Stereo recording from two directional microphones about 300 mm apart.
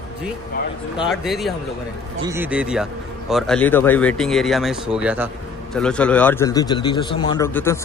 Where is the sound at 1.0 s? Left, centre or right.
Centre.